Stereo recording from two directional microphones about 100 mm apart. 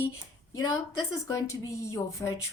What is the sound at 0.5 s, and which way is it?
A woman's voice, 35° left (ahead or behind).